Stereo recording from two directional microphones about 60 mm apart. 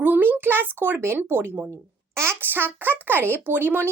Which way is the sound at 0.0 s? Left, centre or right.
Right.